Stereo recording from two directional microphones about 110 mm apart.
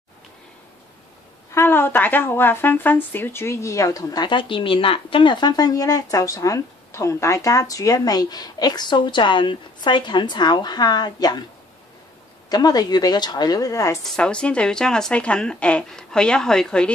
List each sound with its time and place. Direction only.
1.5 s a woman's voice: 20° left (ahead or behind); by 11.4 s 40° left (ahead or behind)
12.4 s a woman's voice: 35° left (ahead or behind)
14.0 s speech: 10° left (ahead or behind)